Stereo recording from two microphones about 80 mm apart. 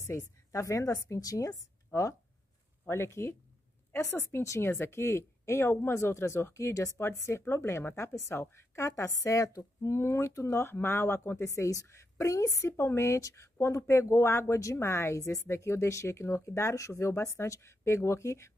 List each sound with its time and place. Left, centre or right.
0.1 s a woman's voice: left